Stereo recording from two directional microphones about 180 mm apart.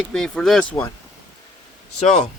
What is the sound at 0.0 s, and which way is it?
Speech, 5° left (ahead or behind).